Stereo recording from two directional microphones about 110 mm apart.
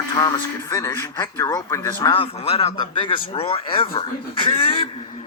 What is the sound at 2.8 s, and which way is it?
Speech, 45° left (ahead or behind).